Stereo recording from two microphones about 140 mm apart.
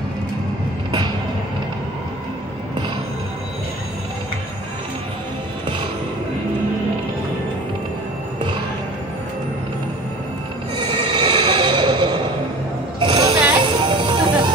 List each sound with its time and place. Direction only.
10.8 s neigh: 30° right (ahead or behind)
13.0 s a sound: 35° right (ahead or behind)
13.7 s music: 35° right (ahead or behind)